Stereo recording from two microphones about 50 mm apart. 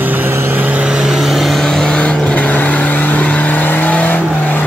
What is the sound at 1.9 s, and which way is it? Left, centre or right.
Vehicle, left.